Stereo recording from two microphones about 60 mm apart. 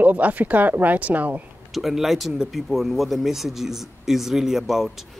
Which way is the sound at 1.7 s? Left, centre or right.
Centre.